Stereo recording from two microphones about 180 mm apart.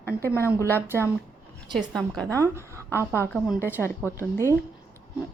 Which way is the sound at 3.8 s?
15° left (ahead or behind).